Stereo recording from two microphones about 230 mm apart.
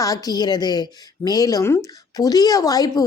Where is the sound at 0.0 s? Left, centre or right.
Centre.